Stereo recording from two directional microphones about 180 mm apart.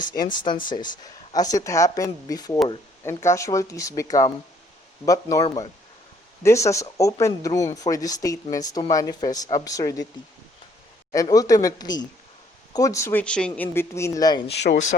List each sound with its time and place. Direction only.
0.0 s speech: 25° left (ahead or behind)
11.1 s speech: 20° left (ahead or behind)
14.5 s speech: 70° left (ahead or behind)